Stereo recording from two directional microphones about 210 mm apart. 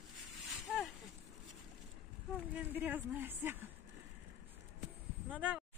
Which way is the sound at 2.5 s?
10° right (ahead or behind).